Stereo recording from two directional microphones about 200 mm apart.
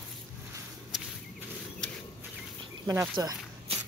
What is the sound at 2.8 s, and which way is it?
Snake, 20° right (ahead or behind).